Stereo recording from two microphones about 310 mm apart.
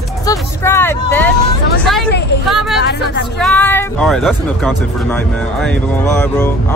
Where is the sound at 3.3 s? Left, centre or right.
Centre.